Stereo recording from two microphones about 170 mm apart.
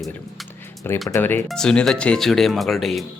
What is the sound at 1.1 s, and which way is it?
Speech, 10° left (ahead or behind).